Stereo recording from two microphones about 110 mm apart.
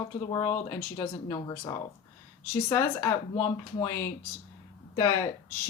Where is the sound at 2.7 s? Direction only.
25° left (ahead or behind).